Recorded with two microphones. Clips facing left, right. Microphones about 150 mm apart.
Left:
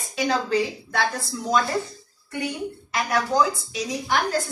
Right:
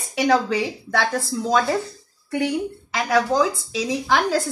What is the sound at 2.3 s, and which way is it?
A woman's voice, 90° right.